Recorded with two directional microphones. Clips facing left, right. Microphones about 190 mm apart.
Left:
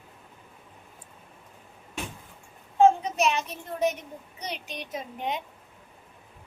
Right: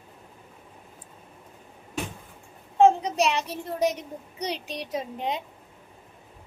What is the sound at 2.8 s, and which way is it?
Child singing, 35° right (ahead or behind).